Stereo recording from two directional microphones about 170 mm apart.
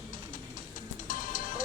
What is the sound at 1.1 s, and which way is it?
Music, 50° left (ahead or behind).